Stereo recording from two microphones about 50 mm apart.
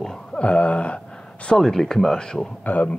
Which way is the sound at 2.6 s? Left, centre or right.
Left.